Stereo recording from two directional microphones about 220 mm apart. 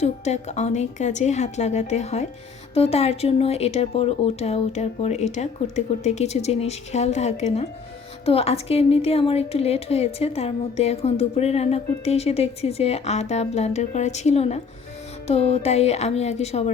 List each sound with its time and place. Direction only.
0.0 s a woman's voice: 30° left (ahead or behind)